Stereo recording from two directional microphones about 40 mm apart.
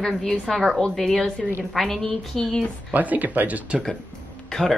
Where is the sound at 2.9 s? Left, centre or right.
Right.